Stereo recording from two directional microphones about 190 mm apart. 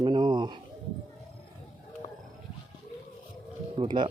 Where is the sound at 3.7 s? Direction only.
25° right (ahead or behind).